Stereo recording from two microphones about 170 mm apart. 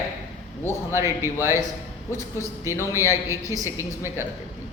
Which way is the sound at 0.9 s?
15° right (ahead or behind).